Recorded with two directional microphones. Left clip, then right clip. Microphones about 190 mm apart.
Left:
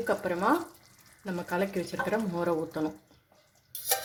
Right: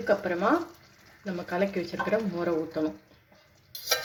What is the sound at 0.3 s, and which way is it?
Speech, 50° left (ahead or behind).